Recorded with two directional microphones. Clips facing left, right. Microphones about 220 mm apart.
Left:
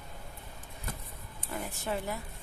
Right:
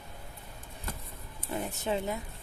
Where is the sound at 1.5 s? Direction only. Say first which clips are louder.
Right 3 dB; 20° right (ahead or behind).